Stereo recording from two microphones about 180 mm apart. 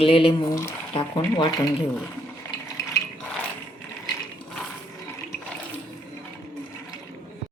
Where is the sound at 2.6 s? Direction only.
15° left (ahead or behind).